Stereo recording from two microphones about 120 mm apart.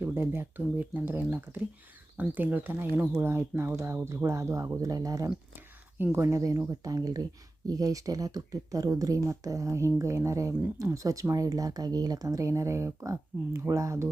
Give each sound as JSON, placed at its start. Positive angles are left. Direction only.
{"t": 0.0, "sound": "speech", "side_deg": -20}